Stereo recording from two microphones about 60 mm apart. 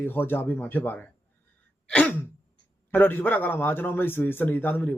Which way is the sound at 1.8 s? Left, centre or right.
Centre.